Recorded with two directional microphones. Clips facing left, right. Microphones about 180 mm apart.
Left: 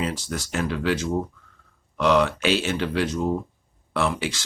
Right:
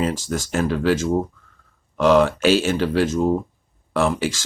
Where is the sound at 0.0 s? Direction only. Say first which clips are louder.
Right 5 dB; 45° right (ahead or behind).